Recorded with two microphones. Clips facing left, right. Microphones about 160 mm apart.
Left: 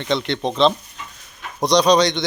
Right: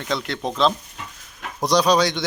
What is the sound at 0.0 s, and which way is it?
Speech, centre (ahead or behind).